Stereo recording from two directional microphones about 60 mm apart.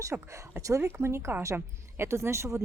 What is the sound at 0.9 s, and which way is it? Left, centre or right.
Speech, right.